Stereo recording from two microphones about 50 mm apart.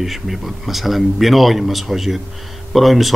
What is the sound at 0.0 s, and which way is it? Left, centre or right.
Speech, centre.